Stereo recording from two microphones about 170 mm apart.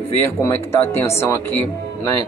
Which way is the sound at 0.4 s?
15° left (ahead or behind).